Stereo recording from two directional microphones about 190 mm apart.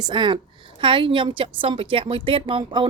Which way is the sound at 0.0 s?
25° right (ahead or behind).